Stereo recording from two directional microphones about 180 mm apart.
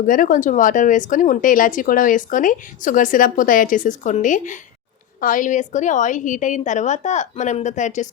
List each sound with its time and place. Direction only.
0.0 s speech: 50° left (ahead or behind)